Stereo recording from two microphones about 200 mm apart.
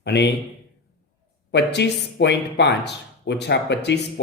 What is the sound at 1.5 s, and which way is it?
A man's voice, 60° left (ahead or behind).